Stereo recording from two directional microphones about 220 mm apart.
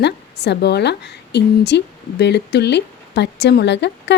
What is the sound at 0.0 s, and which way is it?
A woman's voice, 50° left (ahead or behind).